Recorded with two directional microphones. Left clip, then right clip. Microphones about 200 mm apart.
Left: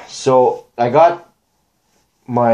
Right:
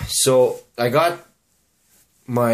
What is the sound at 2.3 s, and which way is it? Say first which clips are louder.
Speech: left 5 dB; 35° right (ahead or behind).